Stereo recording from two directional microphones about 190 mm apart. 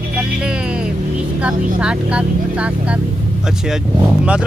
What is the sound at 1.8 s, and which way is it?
Speech, 5° right (ahead or behind).